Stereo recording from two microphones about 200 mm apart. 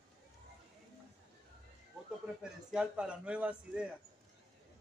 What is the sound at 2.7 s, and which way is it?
A man's voice, 5° right (ahead or behind).